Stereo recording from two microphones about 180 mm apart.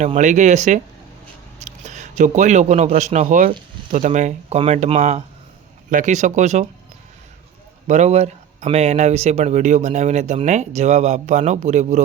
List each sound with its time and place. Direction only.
0.0 s speech: 40° right (ahead or behind)
7.9 s speech: 40° right (ahead or behind)